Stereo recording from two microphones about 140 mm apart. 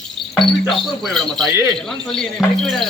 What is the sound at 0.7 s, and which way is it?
Cricket, centre (ahead or behind).